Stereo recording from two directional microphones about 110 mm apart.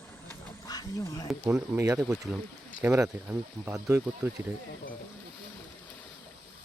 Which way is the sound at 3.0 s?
25° right (ahead or behind).